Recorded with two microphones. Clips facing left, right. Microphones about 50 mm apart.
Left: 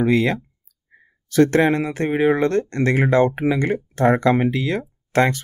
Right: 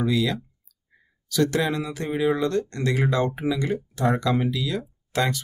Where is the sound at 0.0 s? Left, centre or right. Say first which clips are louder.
Left 6 dB; left.